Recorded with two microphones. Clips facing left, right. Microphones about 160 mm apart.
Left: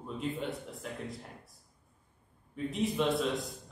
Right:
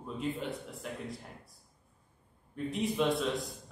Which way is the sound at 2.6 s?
Centre (ahead or behind).